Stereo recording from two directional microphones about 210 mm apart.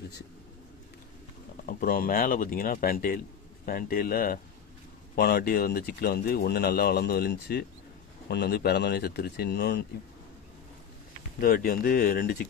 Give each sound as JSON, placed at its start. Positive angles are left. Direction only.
{"t": 1.7, "sound": "speech", "side_deg": 45}
{"t": 11.3, "sound": "speech", "side_deg": 45}